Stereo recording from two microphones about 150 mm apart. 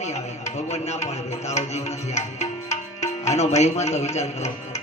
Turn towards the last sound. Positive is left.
turn(degrees=50)  # may be behind; listen again after turning